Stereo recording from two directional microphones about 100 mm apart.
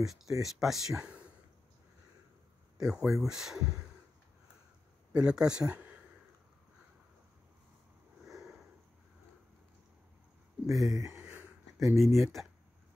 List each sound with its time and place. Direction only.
0.0 s speech: 5° right (ahead or behind)
2.8 s speech: 5° right (ahead or behind)
5.1 s speech: 10° right (ahead or behind)
8.3 s sniff: centre (ahead or behind)
10.7 s speech: centre (ahead or behind)
11.1 s a sound: 20° right (ahead or behind)
12.0 s speech: centre (ahead or behind)